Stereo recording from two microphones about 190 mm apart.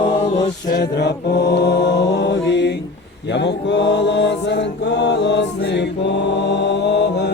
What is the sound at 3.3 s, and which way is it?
Chant, 65° left (ahead or behind).